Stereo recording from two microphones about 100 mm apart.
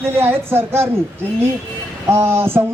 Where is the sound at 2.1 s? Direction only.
25° right (ahead or behind).